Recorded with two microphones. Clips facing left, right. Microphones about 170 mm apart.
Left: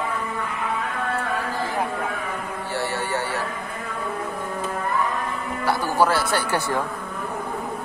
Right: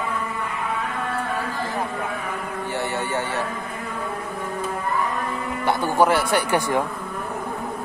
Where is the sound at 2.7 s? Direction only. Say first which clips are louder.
Even; 20° right (ahead or behind).